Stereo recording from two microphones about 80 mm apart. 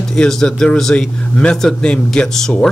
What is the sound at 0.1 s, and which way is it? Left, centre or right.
A man's voice, centre.